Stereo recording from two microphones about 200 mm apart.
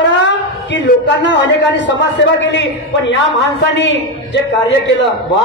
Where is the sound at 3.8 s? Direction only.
65° left (ahead or behind).